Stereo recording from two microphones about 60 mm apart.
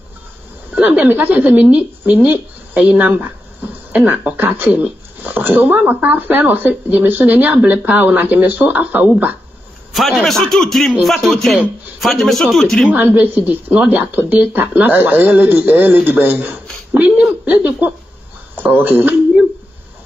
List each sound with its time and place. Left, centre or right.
0.7 s a woman's voice: right
9.9 s a man's voice: centre
12.9 s a woman's voice: right
18.5 s a sound: right